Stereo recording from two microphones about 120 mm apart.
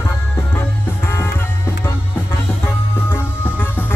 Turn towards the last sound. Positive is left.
turn(degrees=15)  # may be behind; listen again after turning